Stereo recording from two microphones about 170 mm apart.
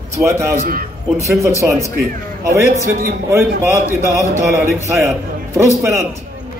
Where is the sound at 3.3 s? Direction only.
15° right (ahead or behind).